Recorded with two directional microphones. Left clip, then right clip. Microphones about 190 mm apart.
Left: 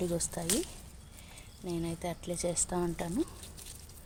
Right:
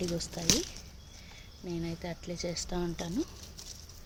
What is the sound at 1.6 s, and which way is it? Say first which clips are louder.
Speech: left 2 dB; 15° left (ahead or behind).